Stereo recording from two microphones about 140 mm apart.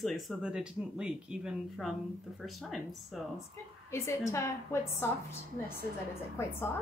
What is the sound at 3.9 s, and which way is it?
Speech, 20° left (ahead or behind).